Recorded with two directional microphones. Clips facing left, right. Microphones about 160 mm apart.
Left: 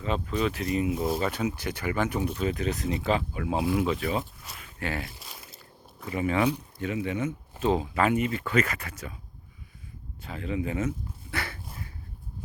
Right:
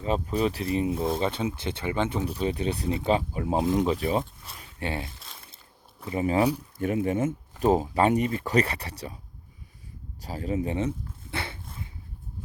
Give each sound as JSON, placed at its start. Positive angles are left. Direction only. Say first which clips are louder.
{"t": 0.0, "sound": "speech", "louder": "right 2 dB", "side_deg": -35}
{"t": 4.0, "sound": "speech", "louder": "right 3 dB", "side_deg": -30}
{"t": 5.2, "sound": "a sound", "louder": "left 2 dB", "side_deg": 5}
{"t": 6.1, "sound": "speech", "louder": "right 2 dB", "side_deg": -35}
{"t": 6.7, "sound": "speech", "louder": "right 4 dB", "side_deg": -50}
{"t": 10.2, "sound": "dog", "louder": "right 2 dB", "side_deg": -40}